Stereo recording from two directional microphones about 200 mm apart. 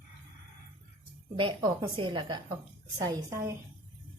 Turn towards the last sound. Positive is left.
turn(degrees=-15)  # may be behind; listen again after turning